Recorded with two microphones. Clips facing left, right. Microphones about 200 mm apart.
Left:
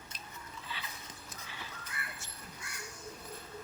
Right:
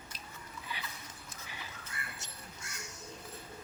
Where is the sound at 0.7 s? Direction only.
15° right (ahead or behind).